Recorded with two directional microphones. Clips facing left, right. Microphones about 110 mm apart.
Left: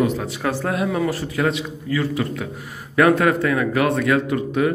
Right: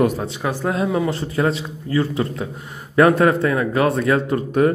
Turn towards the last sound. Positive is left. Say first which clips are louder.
# right 3 dB
turn(degrees=-40)  # may be behind; listen again after turning